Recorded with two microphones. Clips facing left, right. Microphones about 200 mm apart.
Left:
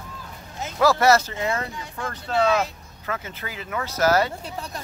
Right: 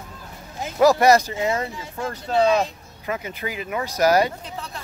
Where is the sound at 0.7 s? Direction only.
15° right (ahead or behind).